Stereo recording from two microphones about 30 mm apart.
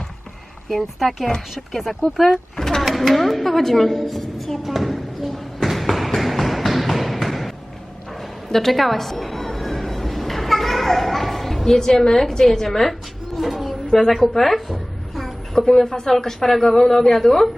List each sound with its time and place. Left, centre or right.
0.8 s a woman's voice: centre
2.6 s a sound: centre
2.8 s a woman's voice: centre
4.2 s hands: centre
4.6 s a sound: centre
8.4 s music: centre
12.0 s a woman's voice: centre
13.5 s a sound: centre
14.2 s music: centre
15.5 s a woman's voice: centre